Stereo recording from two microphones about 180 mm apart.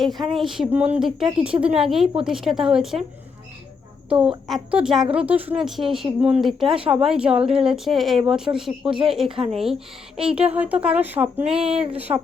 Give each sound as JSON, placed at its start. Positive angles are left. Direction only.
{"t": 0.0, "sound": "speech", "side_deg": 0}
{"t": 4.1, "sound": "speech", "side_deg": -5}
{"t": 11.7, "sound": "speech", "side_deg": -30}
{"t": 11.9, "sound": "speech", "side_deg": -10}